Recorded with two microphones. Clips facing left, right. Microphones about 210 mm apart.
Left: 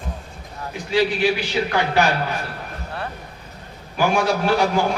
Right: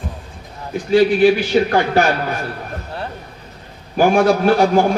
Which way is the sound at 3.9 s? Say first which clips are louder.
Right 6 dB; 50° right (ahead or behind).